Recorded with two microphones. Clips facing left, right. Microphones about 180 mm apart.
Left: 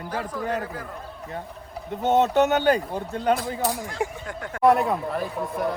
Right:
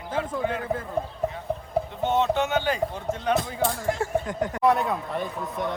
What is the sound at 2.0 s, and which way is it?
Speech, 40° left (ahead or behind).